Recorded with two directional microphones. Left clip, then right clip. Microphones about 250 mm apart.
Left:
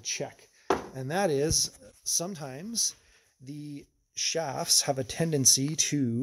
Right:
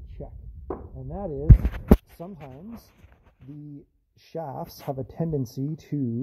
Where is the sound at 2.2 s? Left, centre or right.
Left.